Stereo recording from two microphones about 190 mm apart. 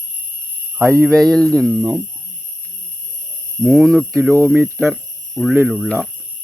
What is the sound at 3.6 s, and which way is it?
Speech, 5° right (ahead or behind).